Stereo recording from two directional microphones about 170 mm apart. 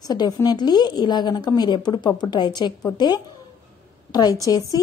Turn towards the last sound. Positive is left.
turn(degrees=20)  # may be behind; listen again after turning